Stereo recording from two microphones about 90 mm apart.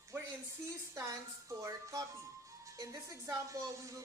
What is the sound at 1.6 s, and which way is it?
Speech, 35° right (ahead or behind).